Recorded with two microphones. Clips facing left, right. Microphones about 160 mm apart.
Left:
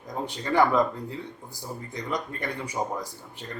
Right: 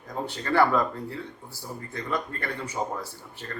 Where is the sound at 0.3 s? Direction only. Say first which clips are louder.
Even; 15° left (ahead or behind).